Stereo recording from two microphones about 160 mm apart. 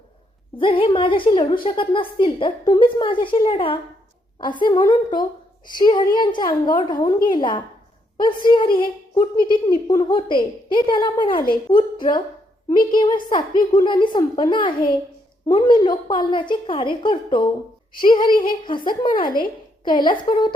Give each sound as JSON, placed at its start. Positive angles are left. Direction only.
{"t": 0.6, "sound": "a woman's voice", "side_deg": 30}
{"t": 19.2, "sound": "speech", "side_deg": 60}
{"t": 19.8, "sound": "a woman's voice", "side_deg": 30}